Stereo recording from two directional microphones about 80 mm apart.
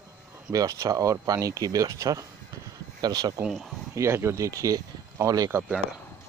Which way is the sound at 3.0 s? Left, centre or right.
Right.